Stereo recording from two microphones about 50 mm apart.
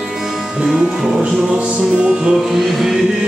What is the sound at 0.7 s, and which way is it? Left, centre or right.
Music, centre.